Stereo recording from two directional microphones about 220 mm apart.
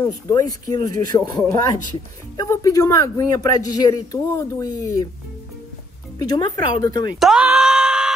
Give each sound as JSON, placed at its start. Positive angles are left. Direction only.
{"t": 0.0, "sound": "speech", "side_deg": 15}
{"t": 6.1, "sound": "speech", "side_deg": 15}
{"t": 7.2, "sound": "groan", "side_deg": -5}